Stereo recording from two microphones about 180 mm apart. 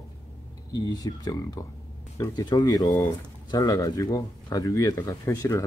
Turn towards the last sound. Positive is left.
turn(degrees=20)  # may be behind; listen again after turning